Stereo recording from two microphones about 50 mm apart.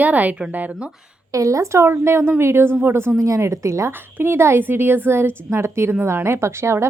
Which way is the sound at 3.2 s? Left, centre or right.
Right.